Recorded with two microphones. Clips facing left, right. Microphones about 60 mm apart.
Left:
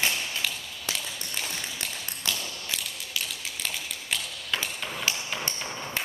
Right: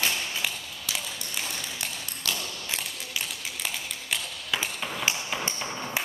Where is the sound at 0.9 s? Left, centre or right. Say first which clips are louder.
Left 1 dB; left.